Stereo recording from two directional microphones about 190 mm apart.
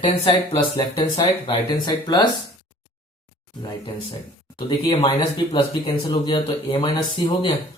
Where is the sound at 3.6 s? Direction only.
25° left (ahead or behind).